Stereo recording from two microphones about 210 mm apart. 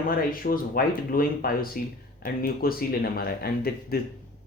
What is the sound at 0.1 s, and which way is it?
Speech, 45° left (ahead or behind).